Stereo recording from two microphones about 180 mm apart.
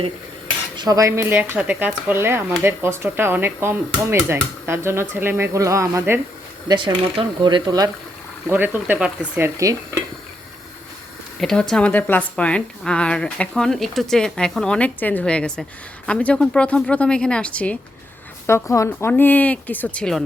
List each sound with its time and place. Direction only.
0.8 s speech: 20° right (ahead or behind)
6.7 s speech: 25° right (ahead or behind)
8.4 s speech: 10° right (ahead or behind)
9.6 s speech: 15° right (ahead or behind)
11.3 s a woman's voice: centre (ahead or behind)